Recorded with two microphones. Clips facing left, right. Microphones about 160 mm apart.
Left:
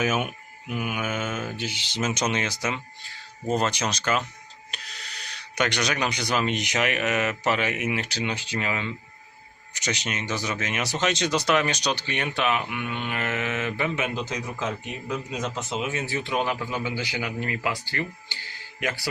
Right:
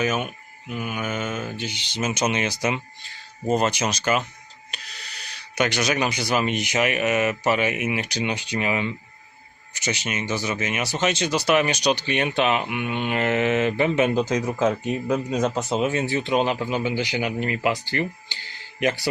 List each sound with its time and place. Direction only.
0.0 s speech: 5° left (ahead or behind); by 9.0 s 15° right (ahead or behind)
9.7 s speech: 5° right (ahead or behind); by 17.7 s 20° right (ahead or behind)
18.8 s speech: 20° right (ahead or behind)